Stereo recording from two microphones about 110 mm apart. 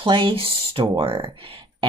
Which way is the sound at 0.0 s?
55° right (ahead or behind).